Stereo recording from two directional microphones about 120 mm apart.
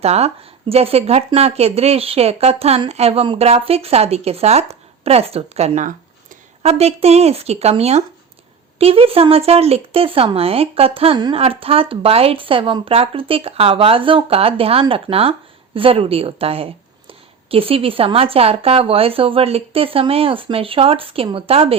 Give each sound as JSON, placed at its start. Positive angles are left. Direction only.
{"t": 0.0, "sound": "speech", "side_deg": -60}
{"t": 6.6, "sound": "a woman's voice", "side_deg": -60}